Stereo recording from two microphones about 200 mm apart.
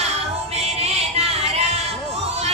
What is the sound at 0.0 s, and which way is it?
Music, 30° right (ahead or behind).